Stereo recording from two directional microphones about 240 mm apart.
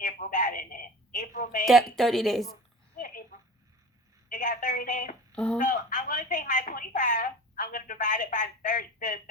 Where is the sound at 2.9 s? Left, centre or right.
Left.